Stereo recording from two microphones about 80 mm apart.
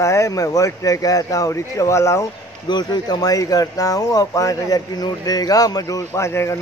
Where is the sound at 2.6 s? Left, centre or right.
Left.